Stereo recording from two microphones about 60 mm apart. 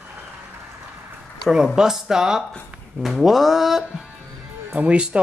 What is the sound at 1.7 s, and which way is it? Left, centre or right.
Speech, centre.